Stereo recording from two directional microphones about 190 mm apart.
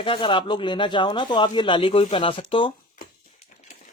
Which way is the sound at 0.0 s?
25° left (ahead or behind).